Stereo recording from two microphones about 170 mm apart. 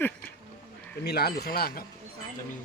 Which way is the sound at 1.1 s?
65° left (ahead or behind).